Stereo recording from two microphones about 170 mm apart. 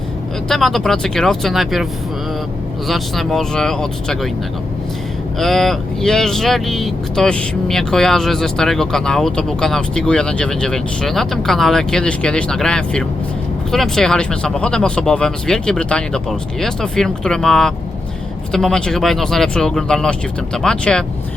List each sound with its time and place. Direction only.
0.4 s speech: centre (ahead or behind)
5.4 s speech: centre (ahead or behind)